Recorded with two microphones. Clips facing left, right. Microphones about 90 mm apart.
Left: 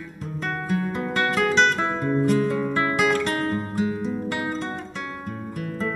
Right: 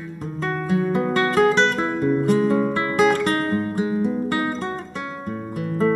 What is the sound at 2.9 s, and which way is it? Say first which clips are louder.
Music: right 7 dB; 45° right (ahead or behind).